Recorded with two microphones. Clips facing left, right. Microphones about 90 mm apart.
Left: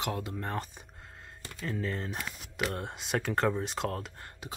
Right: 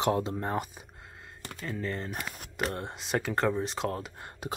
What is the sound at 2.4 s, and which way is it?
Speech, 40° right (ahead or behind).